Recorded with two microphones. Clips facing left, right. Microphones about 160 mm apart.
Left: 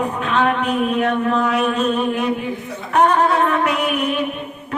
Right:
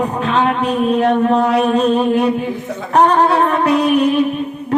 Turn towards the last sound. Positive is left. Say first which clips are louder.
# right 7 dB
turn(degrees=-35)  # may be behind; listen again after turning